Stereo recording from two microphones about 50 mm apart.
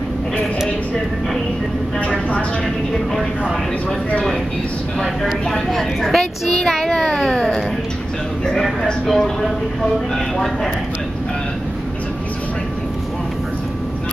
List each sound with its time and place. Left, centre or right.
2.0 s vehicle: left
5.0 s a woman's voice: centre
7.2 s a sound: centre
8.5 s speech: centre